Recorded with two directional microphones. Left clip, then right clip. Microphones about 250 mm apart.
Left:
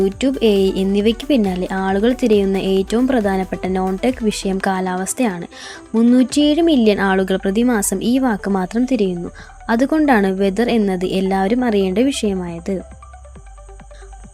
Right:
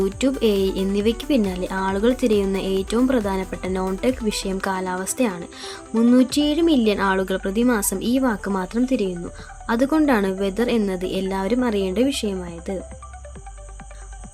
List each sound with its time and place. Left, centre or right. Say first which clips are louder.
0.2 s a woman's voice: left 3 dB; centre